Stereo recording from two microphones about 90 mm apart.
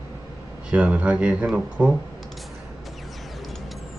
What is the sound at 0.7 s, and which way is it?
Speech, 15° right (ahead or behind).